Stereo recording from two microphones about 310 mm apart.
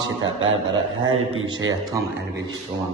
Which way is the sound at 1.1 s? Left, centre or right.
Right.